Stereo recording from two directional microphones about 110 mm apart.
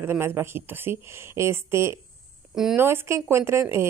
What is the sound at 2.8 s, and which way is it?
Speech, 25° right (ahead or behind).